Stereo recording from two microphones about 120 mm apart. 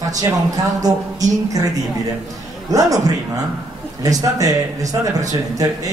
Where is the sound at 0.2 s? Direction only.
30° right (ahead or behind).